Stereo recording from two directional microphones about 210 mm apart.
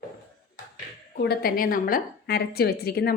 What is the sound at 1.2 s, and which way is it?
A woman's voice, 50° left (ahead or behind).